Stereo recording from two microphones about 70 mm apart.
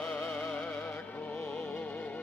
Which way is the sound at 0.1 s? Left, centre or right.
Centre.